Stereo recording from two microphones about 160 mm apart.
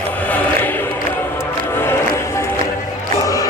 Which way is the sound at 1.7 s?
15° left (ahead or behind).